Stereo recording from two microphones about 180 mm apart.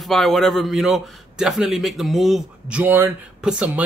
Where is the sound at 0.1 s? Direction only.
Centre (ahead or behind).